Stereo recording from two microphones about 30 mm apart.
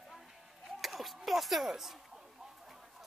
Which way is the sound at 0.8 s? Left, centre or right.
Centre.